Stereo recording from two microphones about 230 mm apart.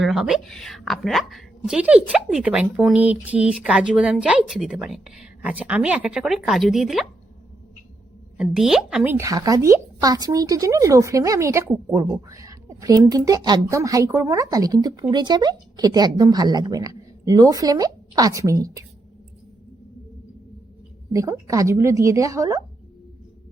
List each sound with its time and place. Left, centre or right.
0.0 s speech: centre
8.4 s a woman's voice: centre
21.1 s a woman's voice: centre